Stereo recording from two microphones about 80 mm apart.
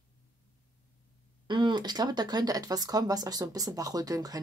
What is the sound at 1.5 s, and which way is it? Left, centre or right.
Speech, right.